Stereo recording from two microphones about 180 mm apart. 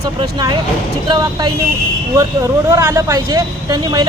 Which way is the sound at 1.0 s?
25° right (ahead or behind).